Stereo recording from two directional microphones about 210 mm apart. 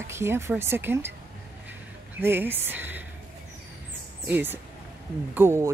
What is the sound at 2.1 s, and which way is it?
Speech, 10° right (ahead or behind).